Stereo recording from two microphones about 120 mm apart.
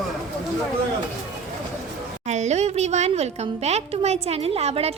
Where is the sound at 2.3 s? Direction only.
70° right (ahead or behind).